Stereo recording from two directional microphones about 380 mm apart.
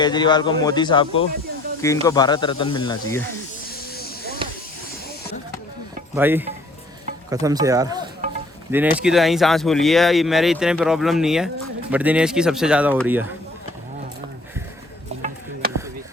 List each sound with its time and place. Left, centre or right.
0.0 s speech: centre
4.4 s chop: centre
6.1 s speech: centre
15.1 s a sound: centre